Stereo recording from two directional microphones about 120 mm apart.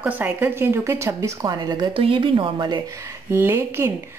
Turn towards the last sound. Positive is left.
turn(degrees=-20)  # may be behind; listen again after turning